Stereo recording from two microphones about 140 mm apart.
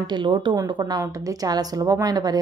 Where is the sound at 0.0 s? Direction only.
35° right (ahead or behind).